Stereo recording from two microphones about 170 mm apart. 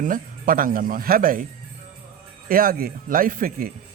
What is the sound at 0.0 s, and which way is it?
Speech, 55° right (ahead or behind).